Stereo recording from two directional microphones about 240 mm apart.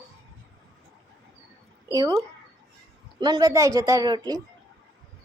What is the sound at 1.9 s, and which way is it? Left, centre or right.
Speech, centre.